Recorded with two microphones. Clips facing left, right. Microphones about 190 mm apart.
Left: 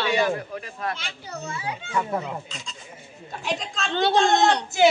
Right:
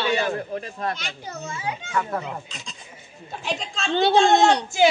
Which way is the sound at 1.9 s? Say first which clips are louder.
Left 1 dB; 10° left (ahead or behind).